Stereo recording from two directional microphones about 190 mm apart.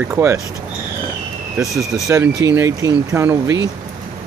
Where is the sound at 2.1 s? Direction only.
15° right (ahead or behind).